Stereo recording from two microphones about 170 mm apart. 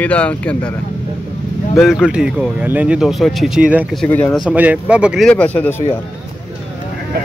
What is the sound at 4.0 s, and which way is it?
Speech, 5° left (ahead or behind).